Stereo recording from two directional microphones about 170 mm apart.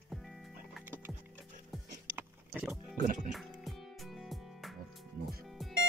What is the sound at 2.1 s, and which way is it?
Vehicle, 10° right (ahead or behind).